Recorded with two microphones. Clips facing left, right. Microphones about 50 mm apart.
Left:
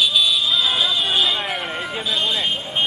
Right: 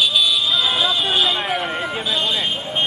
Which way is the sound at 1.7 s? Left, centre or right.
Right.